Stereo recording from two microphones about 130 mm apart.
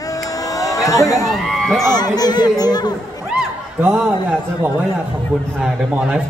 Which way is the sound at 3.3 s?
5° right (ahead or behind).